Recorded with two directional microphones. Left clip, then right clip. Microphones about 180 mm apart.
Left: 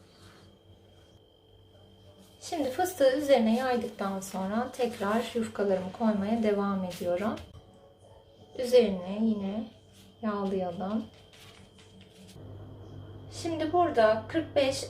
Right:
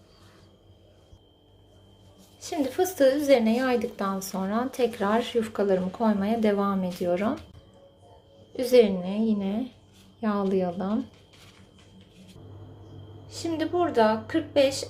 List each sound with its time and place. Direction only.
2.4 s a woman's voice: 40° right (ahead or behind)
8.5 s a woman's voice: 40° right (ahead or behind)
13.2 s a woman's voice: 50° right (ahead or behind)